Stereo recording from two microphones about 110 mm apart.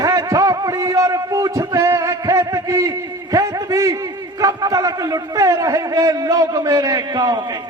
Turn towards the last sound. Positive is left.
turn(degrees=-35)  # may be behind; listen again after turning